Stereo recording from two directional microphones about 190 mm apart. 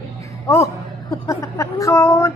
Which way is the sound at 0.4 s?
15° left (ahead or behind).